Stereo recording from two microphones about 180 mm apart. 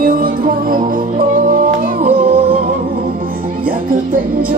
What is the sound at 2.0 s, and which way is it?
Music, 30° right (ahead or behind).